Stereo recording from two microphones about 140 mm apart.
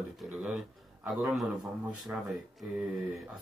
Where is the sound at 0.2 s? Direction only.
5° right (ahead or behind).